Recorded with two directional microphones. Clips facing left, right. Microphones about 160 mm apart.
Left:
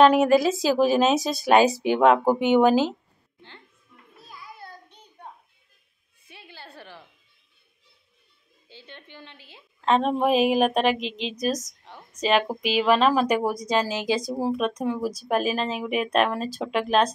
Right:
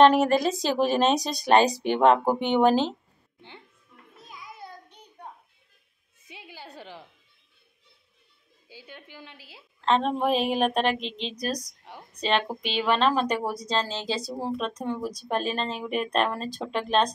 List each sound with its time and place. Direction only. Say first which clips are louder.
0.0 s a woman's voice: left 2 dB; centre (ahead or behind)
4.3 s child singing: even; 15° right (ahead or behind)
6.2 s music: right 1 dB; 15° right (ahead or behind)
8.6 s a woman's voice: even; 10° right (ahead or behind)
9.8 s a woman's voice: left 2 dB; 5° left (ahead or behind)
11.9 s a sound: right 2 dB; 10° right (ahead or behind)
12.2 s a woman's voice: left 4 dB; 5° left (ahead or behind)